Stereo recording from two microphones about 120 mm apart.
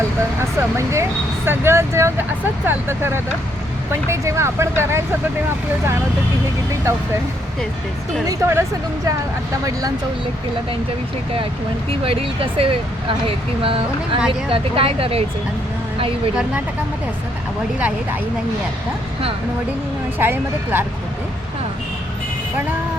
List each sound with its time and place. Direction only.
0.3 s speech: 25° right (ahead or behind)
8.3 s speech: 20° right (ahead or behind)
11.9 s speech: 50° right (ahead or behind)
17.7 s speech: 10° right (ahead or behind)
20.1 s speech: 20° right (ahead or behind)